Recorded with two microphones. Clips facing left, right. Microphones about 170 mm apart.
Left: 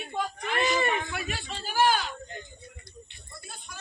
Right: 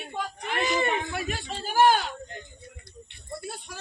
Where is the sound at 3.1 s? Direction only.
65° right (ahead or behind).